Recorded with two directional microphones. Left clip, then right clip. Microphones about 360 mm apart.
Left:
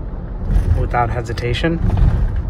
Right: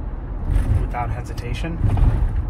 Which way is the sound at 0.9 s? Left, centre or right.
Left.